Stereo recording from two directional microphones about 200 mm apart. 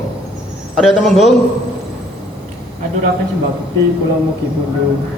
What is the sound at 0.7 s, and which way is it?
Speech, centre (ahead or behind).